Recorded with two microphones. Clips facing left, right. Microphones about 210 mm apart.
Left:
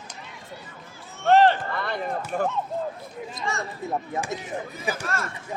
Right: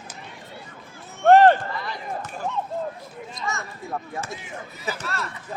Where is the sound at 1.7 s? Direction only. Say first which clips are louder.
Left 4 dB; 60° left (ahead or behind).